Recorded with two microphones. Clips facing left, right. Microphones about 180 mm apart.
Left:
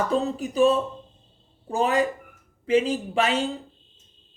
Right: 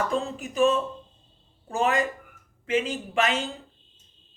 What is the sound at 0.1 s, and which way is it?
Speech, 35° left (ahead or behind).